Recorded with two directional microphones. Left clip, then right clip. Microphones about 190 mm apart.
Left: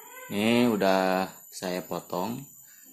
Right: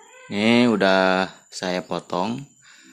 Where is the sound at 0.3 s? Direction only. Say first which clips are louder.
Right 6 dB; 25° right (ahead or behind).